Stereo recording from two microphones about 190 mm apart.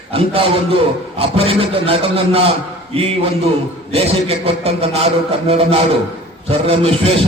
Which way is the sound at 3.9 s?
30° right (ahead or behind).